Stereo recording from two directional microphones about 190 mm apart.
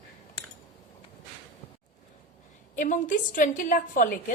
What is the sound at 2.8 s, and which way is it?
A woman's voice, 45° left (ahead or behind).